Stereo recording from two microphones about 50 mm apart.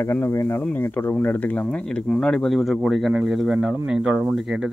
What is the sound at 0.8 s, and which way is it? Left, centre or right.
Speech, left.